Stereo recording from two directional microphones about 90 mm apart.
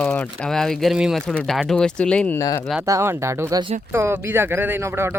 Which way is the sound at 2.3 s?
40° left (ahead or behind).